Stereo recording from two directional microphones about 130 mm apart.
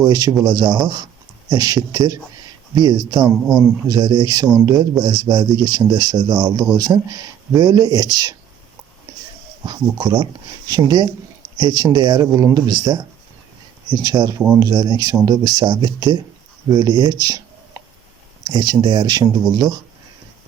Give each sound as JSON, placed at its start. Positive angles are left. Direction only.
{"t": 0.0, "sound": "speech", "side_deg": -30}
{"t": 9.6, "sound": "speech", "side_deg": -35}
{"t": 18.4, "sound": "speech", "side_deg": -35}